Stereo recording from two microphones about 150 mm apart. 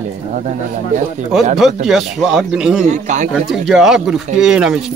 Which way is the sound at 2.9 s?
55° right (ahead or behind).